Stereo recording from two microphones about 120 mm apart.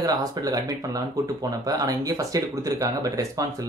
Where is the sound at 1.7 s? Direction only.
30° right (ahead or behind).